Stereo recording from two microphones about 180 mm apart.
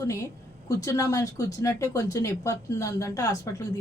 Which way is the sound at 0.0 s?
20° left (ahead or behind).